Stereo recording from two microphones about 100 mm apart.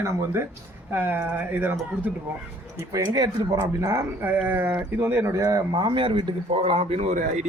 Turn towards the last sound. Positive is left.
turn(degrees=-90)